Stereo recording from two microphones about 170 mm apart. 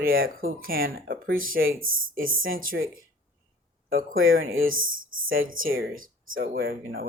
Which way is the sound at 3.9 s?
55° right (ahead or behind).